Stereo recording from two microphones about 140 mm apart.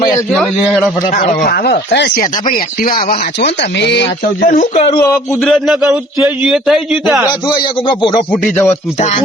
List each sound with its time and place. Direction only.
1.4 s speech: 90° left
4.4 s speech: 75° left (ahead or behind)
4.9 s speech: 20° left (ahead or behind)
5.4 s a man's voice: 5° left (ahead or behind)
7.9 s speech: 35° left (ahead or behind)
8.3 s speech: 15° left (ahead or behind)
9.0 s speech: 55° left (ahead or behind)